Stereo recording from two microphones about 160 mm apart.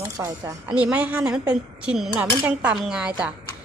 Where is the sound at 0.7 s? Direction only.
10° right (ahead or behind).